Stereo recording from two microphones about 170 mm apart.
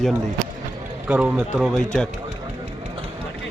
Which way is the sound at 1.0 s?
10° right (ahead or behind).